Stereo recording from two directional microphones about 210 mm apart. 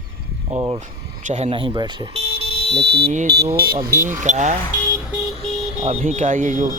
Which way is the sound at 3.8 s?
40° right (ahead or behind).